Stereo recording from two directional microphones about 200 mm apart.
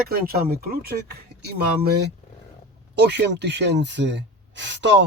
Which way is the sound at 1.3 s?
55° right (ahead or behind).